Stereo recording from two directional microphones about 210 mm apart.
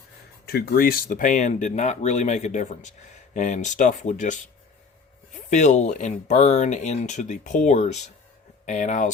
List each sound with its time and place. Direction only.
0.4 s speech: 45° left (ahead or behind)
5.5 s speech: 35° left (ahead or behind)